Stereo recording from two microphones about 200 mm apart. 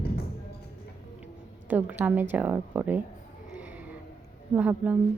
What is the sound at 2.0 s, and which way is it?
A woman's voice, 10° right (ahead or behind).